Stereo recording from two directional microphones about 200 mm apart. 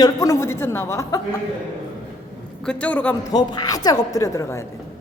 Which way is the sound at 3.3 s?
20° left (ahead or behind).